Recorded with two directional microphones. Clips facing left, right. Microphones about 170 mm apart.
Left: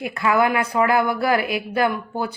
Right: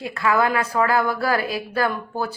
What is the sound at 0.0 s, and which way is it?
Speech, 20° left (ahead or behind).